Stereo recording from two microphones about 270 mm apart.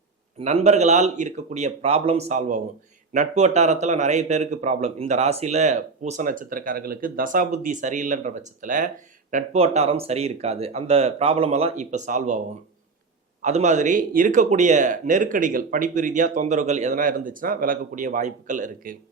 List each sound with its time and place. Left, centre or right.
0.3 s a man's voice: right
13.4 s a man's voice: right